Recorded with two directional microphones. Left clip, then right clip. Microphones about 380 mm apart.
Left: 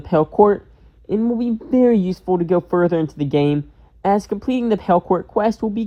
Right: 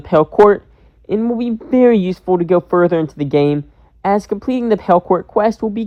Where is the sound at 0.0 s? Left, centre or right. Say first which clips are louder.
Right 4 dB; right.